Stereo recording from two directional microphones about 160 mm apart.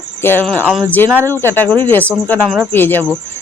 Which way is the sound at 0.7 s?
10° right (ahead or behind).